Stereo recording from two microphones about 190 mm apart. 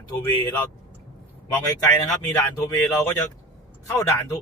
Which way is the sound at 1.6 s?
20° left (ahead or behind).